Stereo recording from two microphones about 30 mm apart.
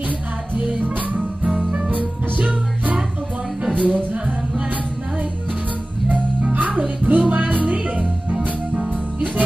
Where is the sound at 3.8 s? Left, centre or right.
Right.